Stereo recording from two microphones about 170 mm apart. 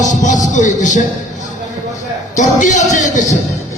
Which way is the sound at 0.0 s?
45° left (ahead or behind).